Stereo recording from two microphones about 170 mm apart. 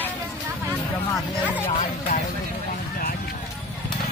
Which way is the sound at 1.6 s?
40° left (ahead or behind).